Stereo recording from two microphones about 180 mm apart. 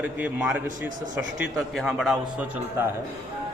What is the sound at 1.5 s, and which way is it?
Speech, centre (ahead or behind).